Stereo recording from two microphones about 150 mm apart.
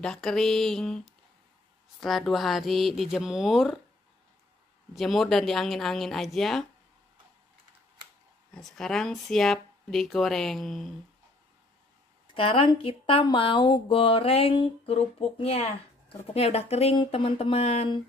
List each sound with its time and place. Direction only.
0.0 s speech: 5° left (ahead or behind)
4.9 s speech: centre (ahead or behind)
8.5 s speech: 5° left (ahead or behind)
12.4 s speech: 35° left (ahead or behind)